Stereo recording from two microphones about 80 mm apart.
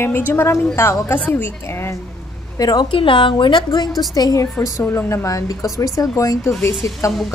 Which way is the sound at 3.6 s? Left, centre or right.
Left.